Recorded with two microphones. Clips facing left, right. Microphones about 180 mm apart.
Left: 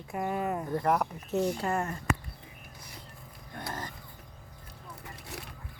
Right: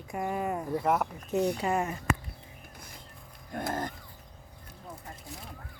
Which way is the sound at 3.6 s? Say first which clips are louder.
Right 6 dB; 50° right (ahead or behind).